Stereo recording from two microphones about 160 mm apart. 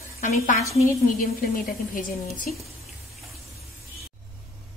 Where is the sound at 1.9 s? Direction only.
60° left (ahead or behind).